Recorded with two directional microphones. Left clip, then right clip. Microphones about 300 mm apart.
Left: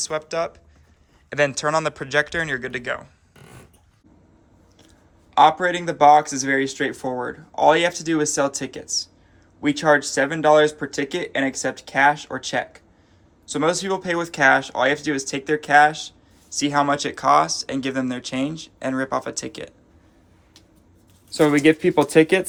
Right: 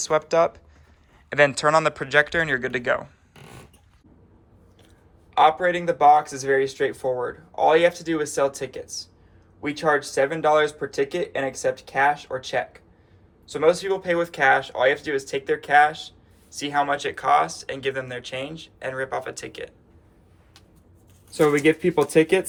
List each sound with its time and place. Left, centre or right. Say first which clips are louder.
0.0 s speech: right 5 dB; centre
5.3 s speech: left 2 dB; centre
21.3 s speech: left 2 dB; left